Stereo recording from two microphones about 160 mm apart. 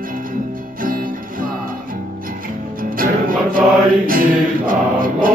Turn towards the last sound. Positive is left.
turn(degrees=-60)  # may be behind; listen again after turning